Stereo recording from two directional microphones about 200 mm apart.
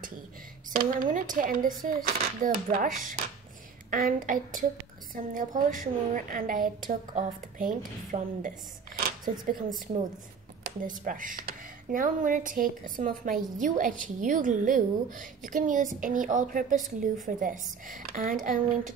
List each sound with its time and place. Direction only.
0.7 s a woman's voice: 45° right (ahead or behind)